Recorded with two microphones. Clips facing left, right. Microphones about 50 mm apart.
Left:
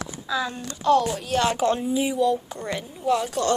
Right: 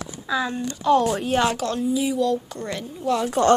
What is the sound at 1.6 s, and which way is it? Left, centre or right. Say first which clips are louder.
Speech: left 1 dB; left.